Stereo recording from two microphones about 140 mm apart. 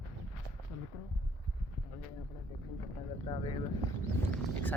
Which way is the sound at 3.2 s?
40° left (ahead or behind).